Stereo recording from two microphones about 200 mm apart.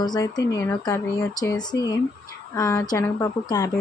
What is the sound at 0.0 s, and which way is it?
A woman's voice, 20° left (ahead or behind).